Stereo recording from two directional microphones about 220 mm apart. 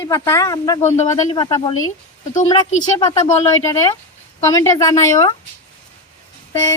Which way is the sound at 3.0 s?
15° left (ahead or behind).